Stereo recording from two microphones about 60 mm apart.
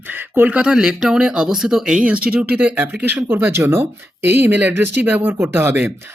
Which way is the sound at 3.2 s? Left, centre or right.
Right.